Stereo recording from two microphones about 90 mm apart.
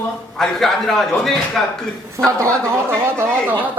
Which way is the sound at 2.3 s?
35° right (ahead or behind).